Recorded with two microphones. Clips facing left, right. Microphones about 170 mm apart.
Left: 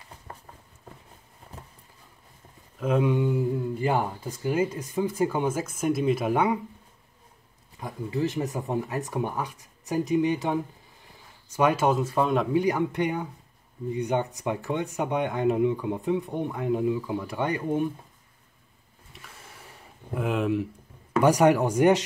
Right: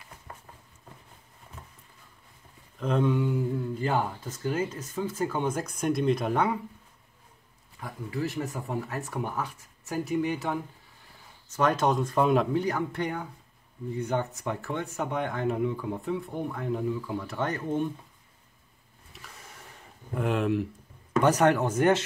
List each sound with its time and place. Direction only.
1.5 s a sound: 35° left (ahead or behind)
2.8 s speech: 10° left (ahead or behind)
7.8 s speech: 20° left (ahead or behind); by 12.4 s centre (ahead or behind)
12.5 s speech: 15° left (ahead or behind)
19.1 s a sound: centre (ahead or behind)
20.2 s speech: centre (ahead or behind)